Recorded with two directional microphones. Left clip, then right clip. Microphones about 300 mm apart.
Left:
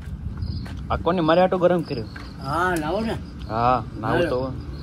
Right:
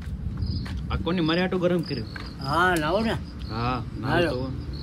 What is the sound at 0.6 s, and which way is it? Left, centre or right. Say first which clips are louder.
Speech: left 8 dB; centre.